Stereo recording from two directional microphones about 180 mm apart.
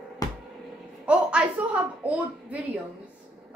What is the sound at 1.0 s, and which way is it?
A woman's voice, 5° right (ahead or behind).